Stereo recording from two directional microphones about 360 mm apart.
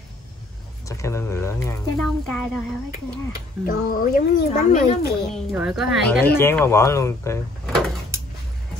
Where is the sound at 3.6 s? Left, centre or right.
Left.